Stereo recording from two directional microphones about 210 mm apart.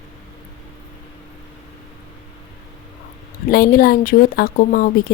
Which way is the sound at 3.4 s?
45° left (ahead or behind).